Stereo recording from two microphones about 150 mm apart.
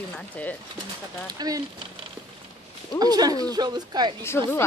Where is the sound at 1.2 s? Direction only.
25° right (ahead or behind).